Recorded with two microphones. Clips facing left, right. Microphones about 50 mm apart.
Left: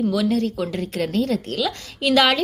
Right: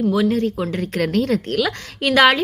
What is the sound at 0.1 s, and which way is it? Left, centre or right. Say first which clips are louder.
A woman's voice: right 2 dB; right.